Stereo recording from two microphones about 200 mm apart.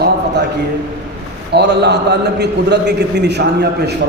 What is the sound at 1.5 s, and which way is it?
A man's voice, 55° right (ahead or behind).